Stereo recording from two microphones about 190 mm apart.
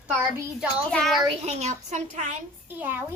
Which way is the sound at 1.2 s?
35° right (ahead or behind).